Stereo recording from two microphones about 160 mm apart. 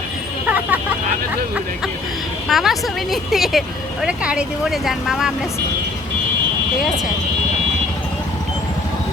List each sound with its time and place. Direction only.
0.5 s vehicle: 10° right (ahead or behind)
2.5 s speech: centre (ahead or behind)